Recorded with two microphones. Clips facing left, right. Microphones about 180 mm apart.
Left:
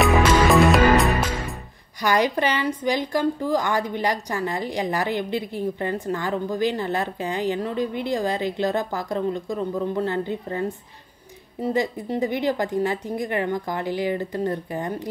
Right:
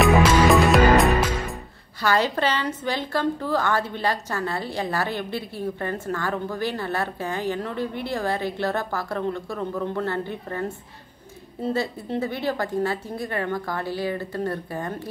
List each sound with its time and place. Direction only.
0.0 s music: 5° right (ahead or behind)
2.0 s a woman's voice: 15° left (ahead or behind)